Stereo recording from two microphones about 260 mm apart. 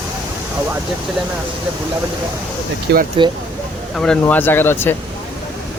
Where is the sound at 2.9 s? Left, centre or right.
Right.